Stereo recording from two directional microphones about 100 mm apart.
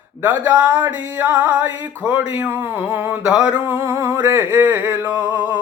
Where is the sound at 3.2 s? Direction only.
10° right (ahead or behind).